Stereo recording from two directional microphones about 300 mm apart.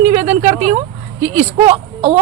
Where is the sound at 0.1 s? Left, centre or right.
Right.